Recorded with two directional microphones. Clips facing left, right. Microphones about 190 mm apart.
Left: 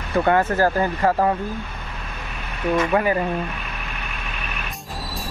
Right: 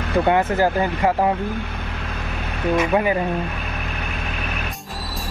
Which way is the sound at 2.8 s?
15° right (ahead or behind).